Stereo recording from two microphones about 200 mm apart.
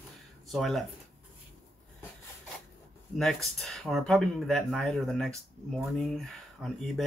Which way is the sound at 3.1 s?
Centre (ahead or behind).